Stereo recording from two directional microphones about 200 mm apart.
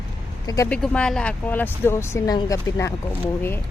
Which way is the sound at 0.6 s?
5° left (ahead or behind).